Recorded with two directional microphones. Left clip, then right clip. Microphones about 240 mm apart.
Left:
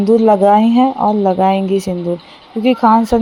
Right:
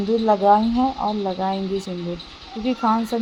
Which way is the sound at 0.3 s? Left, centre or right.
Left.